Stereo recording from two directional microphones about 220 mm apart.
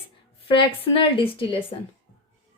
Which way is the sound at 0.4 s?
25° left (ahead or behind).